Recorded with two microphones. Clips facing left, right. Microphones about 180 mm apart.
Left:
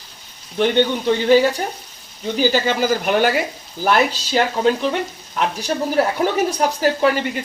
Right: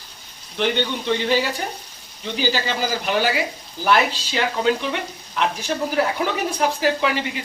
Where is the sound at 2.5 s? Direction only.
50° left (ahead or behind).